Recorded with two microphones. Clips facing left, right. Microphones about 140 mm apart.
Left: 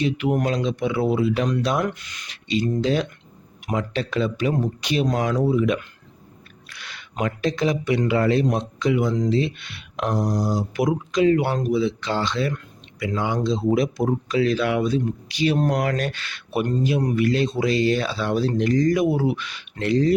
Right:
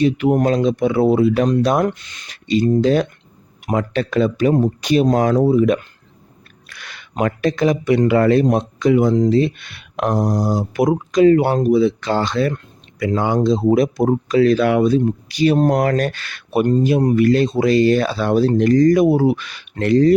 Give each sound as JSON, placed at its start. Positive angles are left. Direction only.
{"t": 0.0, "sound": "speech", "side_deg": -40}
{"t": 1.9, "sound": "speech", "side_deg": -30}
{"t": 2.3, "sound": "speech", "side_deg": -45}